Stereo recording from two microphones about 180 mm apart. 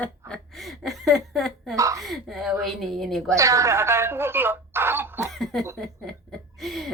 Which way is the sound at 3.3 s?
15° right (ahead or behind).